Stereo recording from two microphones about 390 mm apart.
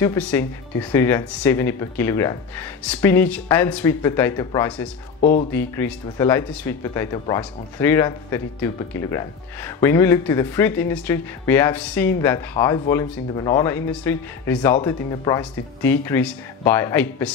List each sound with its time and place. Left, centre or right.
0.0 s speech: centre
5.2 s speech: centre
5.5 s speech: centre